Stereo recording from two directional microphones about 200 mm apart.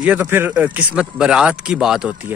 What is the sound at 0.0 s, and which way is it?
A man's voice, 10° right (ahead or behind).